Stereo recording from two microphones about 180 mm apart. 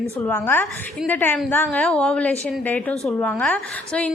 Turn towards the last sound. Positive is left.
turn(degrees=5)  # may be behind; listen again after turning